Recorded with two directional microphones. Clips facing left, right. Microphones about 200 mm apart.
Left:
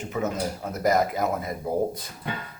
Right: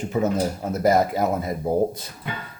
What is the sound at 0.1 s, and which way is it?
Speech, 30° right (ahead or behind).